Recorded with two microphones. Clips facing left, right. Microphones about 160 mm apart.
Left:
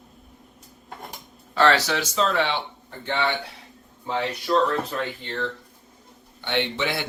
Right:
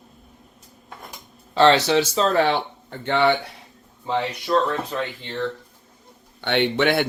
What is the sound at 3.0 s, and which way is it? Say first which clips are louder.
Speech: right 6 dB; 70° right (ahead or behind).